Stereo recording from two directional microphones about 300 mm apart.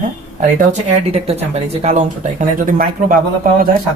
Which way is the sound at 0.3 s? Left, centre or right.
Right.